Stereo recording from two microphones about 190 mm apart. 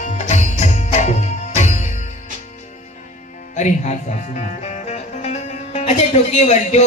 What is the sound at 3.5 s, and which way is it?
Music, 40° left (ahead or behind).